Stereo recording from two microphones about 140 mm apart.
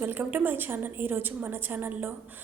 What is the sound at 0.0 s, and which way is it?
A woman's voice, 15° right (ahead or behind).